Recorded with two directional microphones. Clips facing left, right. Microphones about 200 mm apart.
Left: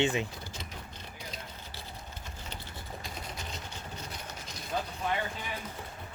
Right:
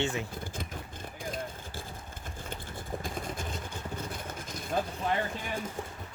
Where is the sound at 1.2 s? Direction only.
50° right (ahead or behind).